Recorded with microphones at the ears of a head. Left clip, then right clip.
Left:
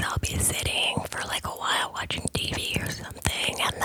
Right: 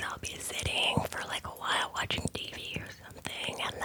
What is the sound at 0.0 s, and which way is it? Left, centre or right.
Whispering, left.